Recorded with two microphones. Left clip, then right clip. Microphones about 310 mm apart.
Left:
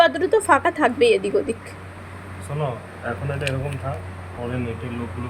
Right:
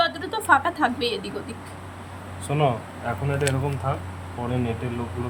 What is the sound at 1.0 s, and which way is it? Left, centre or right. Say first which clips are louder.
Speech: left 10 dB; left.